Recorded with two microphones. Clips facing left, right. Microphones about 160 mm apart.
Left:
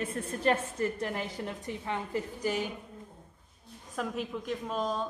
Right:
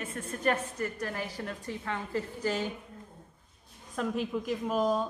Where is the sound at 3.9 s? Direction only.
Centre (ahead or behind).